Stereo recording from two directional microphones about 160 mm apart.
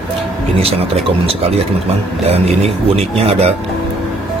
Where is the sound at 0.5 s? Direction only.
35° right (ahead or behind).